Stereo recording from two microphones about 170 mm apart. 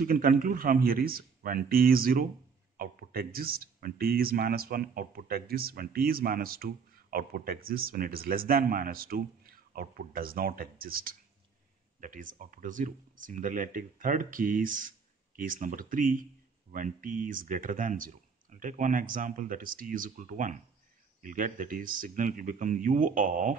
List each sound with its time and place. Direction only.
0.0 s speech: 55° right (ahead or behind)